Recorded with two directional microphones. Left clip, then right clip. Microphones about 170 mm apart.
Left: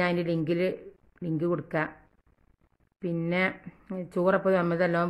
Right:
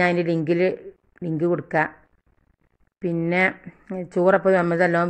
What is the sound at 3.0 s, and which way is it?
Speech, 15° right (ahead or behind).